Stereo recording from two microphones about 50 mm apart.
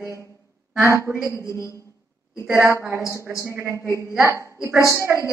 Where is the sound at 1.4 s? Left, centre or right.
Left.